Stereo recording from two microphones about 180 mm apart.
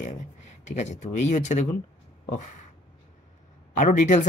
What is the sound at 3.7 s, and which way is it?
Speech, 45° left (ahead or behind).